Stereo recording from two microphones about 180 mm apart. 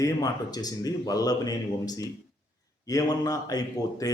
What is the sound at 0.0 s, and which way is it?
A man's voice, 20° left (ahead or behind).